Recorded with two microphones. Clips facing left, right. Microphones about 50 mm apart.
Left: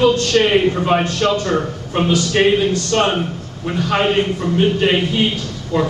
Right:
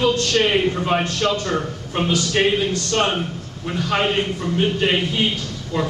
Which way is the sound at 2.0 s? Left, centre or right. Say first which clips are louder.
Left 4 dB; left.